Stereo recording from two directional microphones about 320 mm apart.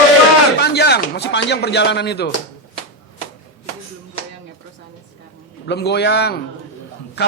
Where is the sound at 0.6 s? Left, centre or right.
Left.